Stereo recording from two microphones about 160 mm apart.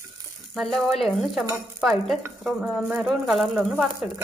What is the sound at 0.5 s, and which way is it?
Speech, centre (ahead or behind).